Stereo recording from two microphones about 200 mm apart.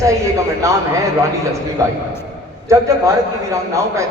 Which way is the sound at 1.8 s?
15° right (ahead or behind).